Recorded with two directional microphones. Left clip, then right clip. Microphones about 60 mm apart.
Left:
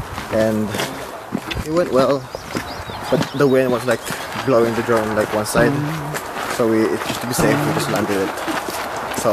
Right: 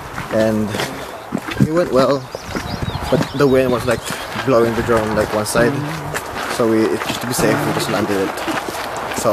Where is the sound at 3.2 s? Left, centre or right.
Centre.